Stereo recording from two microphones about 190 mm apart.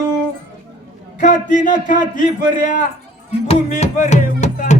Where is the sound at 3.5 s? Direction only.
40° left (ahead or behind).